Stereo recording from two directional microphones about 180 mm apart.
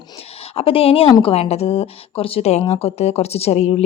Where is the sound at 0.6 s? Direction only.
30° left (ahead or behind).